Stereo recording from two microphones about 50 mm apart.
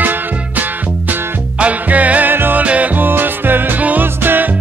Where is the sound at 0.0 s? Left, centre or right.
Right.